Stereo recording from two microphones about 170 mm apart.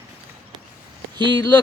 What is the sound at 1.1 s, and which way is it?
Speech, 30° right (ahead or behind).